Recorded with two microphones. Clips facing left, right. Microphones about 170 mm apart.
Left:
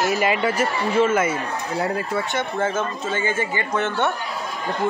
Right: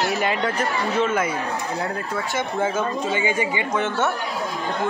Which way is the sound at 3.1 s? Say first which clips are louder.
Left 2 dB; 15° right (ahead or behind).